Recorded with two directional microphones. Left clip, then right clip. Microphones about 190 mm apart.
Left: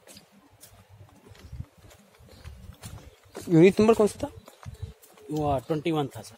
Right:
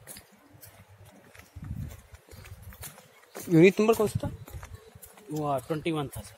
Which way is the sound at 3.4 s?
15° left (ahead or behind).